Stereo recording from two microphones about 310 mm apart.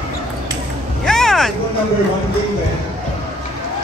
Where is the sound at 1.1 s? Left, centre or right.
Centre.